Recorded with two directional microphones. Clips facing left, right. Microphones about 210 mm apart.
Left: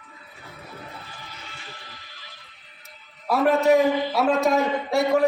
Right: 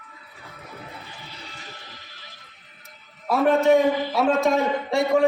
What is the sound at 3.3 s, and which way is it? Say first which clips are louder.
A man's voice: right 1 dB; centre (ahead or behind).